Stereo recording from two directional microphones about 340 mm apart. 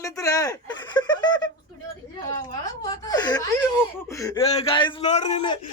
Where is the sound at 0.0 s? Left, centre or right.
Centre.